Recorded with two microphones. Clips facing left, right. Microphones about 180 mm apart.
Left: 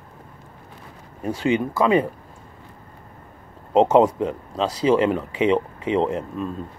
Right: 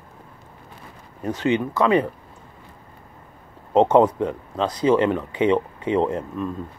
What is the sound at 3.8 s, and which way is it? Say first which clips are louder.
Speech: even; 10° left (ahead or behind).